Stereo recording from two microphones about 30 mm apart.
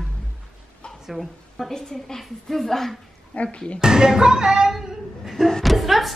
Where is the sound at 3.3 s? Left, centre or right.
Left.